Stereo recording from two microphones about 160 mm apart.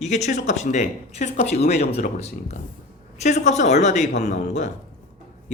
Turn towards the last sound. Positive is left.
turn(degrees=50)  # may be behind; listen again after turning